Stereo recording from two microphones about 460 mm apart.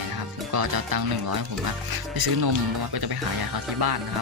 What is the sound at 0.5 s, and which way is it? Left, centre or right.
Speech, right.